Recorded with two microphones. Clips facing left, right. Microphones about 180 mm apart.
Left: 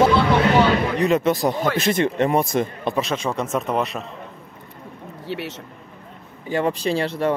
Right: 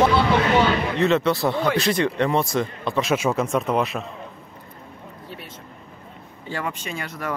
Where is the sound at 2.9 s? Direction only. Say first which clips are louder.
Right 4 dB; 5° right (ahead or behind).